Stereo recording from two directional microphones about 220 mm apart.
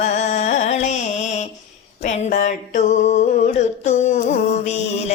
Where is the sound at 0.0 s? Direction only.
35° left (ahead or behind).